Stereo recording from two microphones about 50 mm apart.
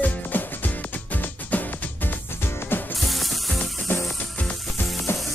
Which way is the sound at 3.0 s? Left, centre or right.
Centre.